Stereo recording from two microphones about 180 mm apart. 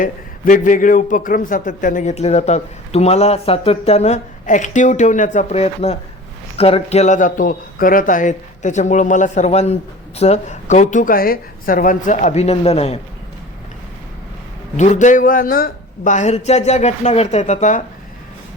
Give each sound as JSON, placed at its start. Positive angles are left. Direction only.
{"t": 0.0, "sound": "a man's voice", "side_deg": 50}
{"t": 14.8, "sound": "speech", "side_deg": 45}